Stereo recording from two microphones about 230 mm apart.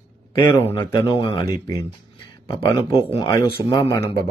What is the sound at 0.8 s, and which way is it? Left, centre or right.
Speech, centre.